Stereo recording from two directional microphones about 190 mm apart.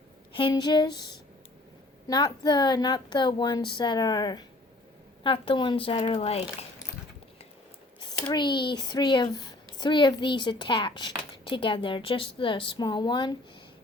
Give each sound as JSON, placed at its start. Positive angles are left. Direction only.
{"t": 0.3, "sound": "speech", "side_deg": 25}
{"t": 2.0, "sound": "speech", "side_deg": 20}
{"t": 8.3, "sound": "speech", "side_deg": 25}